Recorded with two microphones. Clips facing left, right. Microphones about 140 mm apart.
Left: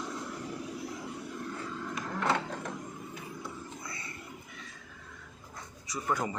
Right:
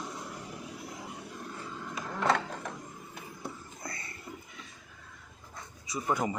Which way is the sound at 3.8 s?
40° right (ahead or behind).